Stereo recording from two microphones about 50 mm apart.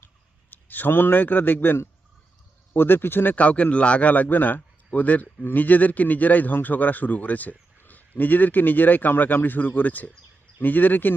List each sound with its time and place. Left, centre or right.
0.5 s a man's voice: left
3.3 s a man's voice: left